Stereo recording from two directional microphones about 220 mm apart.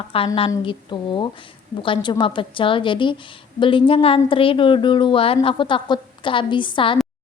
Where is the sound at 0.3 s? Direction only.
20° left (ahead or behind).